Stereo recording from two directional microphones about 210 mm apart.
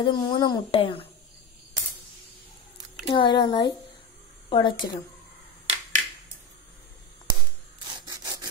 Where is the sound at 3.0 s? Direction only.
25° left (ahead or behind).